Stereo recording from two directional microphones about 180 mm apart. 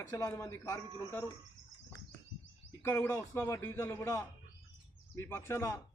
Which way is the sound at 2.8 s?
15° left (ahead or behind).